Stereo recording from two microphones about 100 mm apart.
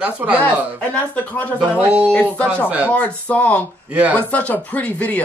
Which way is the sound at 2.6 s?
15° right (ahead or behind).